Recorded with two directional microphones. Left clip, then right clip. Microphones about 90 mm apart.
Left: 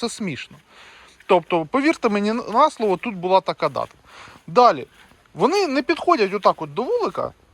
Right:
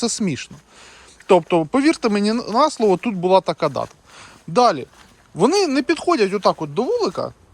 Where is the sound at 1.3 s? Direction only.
40° right (ahead or behind).